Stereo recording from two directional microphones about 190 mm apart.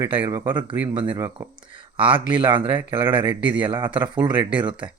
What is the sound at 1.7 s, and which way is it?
Speech, 25° right (ahead or behind).